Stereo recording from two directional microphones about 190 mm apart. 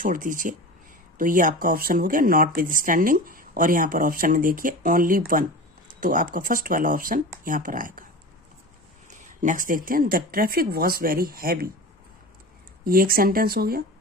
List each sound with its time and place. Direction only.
0.0 s speech: 45° right (ahead or behind)
9.0 s speech: 40° right (ahead or behind)
12.8 s speech: 50° right (ahead or behind)